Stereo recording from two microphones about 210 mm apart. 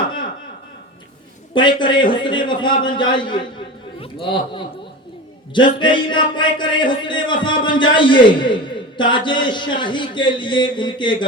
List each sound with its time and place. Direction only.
1.5 s a man's voice: 20° left (ahead or behind)
5.8 s a man's voice: 20° left (ahead or behind)